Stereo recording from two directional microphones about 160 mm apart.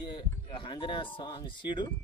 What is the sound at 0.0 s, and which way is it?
Speech, 30° left (ahead or behind).